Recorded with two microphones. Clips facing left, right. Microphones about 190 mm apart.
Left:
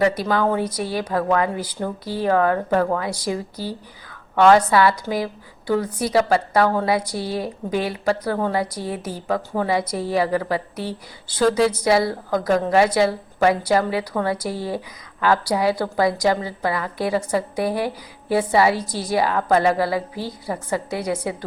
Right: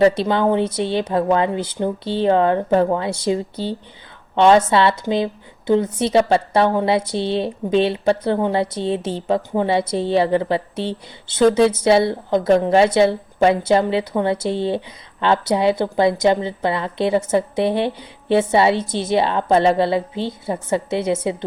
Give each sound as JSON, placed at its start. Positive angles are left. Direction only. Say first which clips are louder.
{"t": 0.0, "sound": "a woman's voice", "louder": "right 4 dB", "side_deg": -25}